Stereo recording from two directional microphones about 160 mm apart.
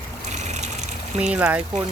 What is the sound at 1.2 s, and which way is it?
Speech, 5° right (ahead or behind).